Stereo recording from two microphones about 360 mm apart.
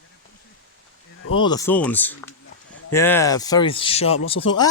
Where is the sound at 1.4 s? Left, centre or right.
Centre.